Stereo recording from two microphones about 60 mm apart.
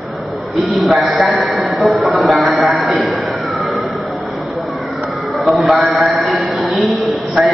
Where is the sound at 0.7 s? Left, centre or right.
Centre.